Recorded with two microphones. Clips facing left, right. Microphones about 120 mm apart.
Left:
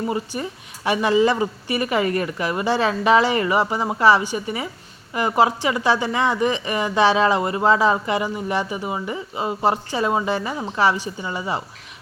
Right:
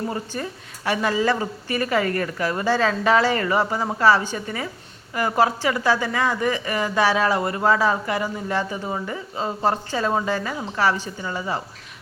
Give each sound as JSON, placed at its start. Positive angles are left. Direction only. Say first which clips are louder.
{"t": 0.3, "sound": "a woman's voice", "louder": "left 1 dB", "side_deg": 15}